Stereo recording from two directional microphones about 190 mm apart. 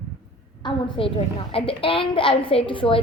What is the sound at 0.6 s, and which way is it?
A woman's voice, 30° left (ahead or behind).